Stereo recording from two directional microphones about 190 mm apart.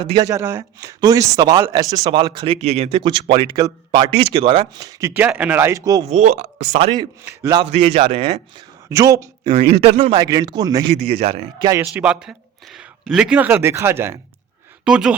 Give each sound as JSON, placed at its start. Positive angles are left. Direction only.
{"t": 0.0, "sound": "speech", "side_deg": -20}
{"t": 6.1, "sound": "speech", "side_deg": -35}
{"t": 7.3, "sound": "speech", "side_deg": -15}
{"t": 7.6, "sound": "speech", "side_deg": -30}
{"t": 8.9, "sound": "speech", "side_deg": -15}
{"t": 9.7, "sound": "speech", "side_deg": -30}
{"t": 10.2, "sound": "speech", "side_deg": -20}
{"t": 10.9, "sound": "speech", "side_deg": -30}
{"t": 11.6, "sound": "a man's voice", "side_deg": -15}